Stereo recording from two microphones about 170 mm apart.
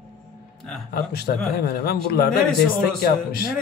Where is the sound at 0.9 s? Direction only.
65° left (ahead or behind).